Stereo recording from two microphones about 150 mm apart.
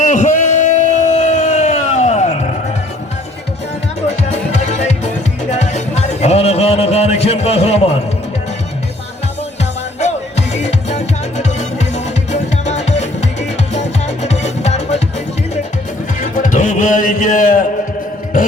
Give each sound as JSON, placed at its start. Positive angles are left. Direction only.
{"t": 0.0, "sound": "a sound", "side_deg": 55}
{"t": 4.2, "sound": "music", "side_deg": 50}
{"t": 10.0, "sound": "music", "side_deg": 45}
{"t": 16.2, "sound": "music", "side_deg": 60}